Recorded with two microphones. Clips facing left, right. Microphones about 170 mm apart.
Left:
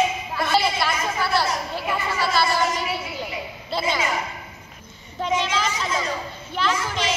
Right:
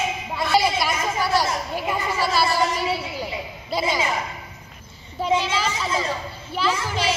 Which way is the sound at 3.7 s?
10° right (ahead or behind).